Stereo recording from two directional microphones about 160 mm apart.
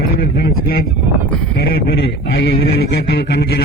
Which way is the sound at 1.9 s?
90° left.